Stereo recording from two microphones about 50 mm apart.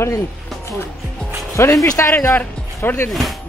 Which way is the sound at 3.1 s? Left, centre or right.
Centre.